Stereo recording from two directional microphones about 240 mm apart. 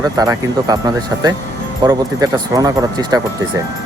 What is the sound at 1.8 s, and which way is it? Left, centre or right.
Speech, centre.